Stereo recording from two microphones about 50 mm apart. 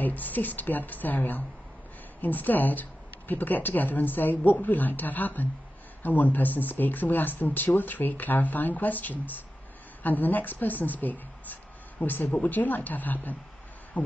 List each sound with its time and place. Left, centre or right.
0.0 s speech: left